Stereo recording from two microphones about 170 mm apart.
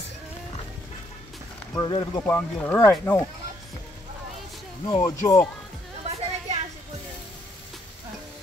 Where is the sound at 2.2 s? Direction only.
10° left (ahead or behind).